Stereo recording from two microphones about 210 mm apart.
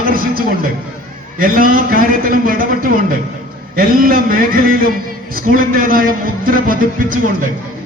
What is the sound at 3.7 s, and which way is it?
A man's voice, 45° right (ahead or behind).